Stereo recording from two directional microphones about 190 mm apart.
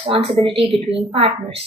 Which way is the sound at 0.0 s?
30° right (ahead or behind).